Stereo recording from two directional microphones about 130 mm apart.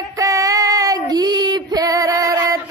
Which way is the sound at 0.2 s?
25° right (ahead or behind).